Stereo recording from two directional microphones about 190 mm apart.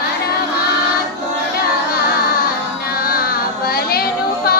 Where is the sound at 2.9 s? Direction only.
50° left (ahead or behind).